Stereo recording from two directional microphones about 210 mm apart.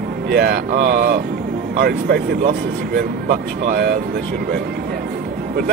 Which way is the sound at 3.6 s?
45° right (ahead or behind).